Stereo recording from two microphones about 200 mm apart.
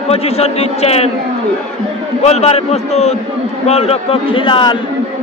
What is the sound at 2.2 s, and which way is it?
A man's voice, 30° left (ahead or behind).